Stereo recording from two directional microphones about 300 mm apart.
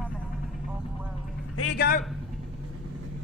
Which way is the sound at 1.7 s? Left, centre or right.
Left.